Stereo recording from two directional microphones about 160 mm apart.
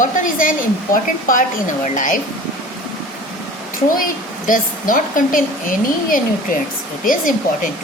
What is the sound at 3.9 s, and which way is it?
A woman's voice, 60° left (ahead or behind).